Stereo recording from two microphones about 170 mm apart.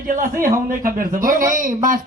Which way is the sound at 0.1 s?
55° right (ahead or behind).